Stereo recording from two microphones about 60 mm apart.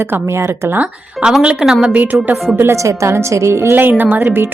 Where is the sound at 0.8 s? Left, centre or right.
Centre.